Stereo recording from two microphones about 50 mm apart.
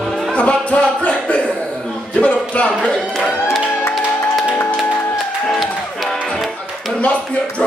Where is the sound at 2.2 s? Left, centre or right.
Left.